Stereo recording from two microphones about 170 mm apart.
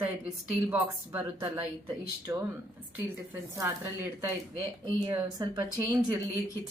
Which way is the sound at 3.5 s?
15° right (ahead or behind).